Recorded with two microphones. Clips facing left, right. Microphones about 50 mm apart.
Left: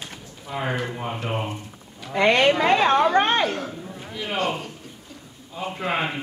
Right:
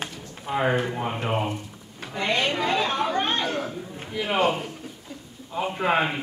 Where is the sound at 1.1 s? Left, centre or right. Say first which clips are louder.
Right 2 dB; centre.